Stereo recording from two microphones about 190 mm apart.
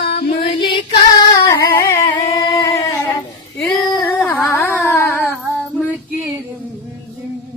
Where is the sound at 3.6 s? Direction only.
Centre (ahead or behind).